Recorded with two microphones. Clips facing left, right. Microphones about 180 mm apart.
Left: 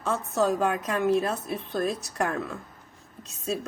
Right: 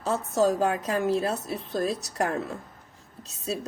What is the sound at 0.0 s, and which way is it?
Speech, 35° right (ahead or behind).